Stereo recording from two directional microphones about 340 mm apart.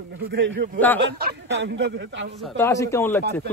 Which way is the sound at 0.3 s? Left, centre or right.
Right.